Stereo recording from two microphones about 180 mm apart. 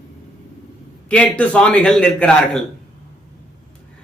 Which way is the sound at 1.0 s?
5° left (ahead or behind).